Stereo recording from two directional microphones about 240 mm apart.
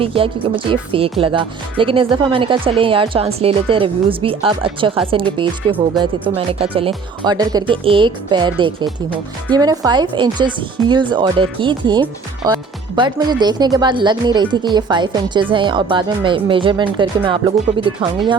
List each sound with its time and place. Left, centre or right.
0.0 s speech: right